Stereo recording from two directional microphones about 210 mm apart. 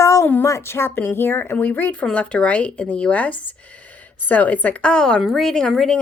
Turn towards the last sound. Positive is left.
turn(degrees=0)  # may be behind; listen again after turning